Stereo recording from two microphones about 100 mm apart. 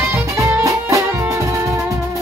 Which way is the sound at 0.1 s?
25° right (ahead or behind).